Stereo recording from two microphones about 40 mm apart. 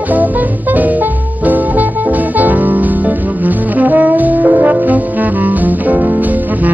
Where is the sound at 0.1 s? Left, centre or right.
Right.